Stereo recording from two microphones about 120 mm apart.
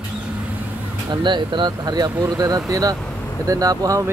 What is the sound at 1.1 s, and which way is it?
Speech, 40° right (ahead or behind).